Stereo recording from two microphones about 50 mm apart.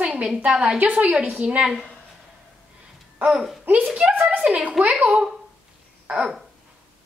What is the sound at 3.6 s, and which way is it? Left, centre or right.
A child's voice, right.